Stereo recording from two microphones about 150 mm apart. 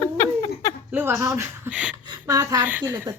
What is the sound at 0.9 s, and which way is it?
Speech, 15° right (ahead or behind).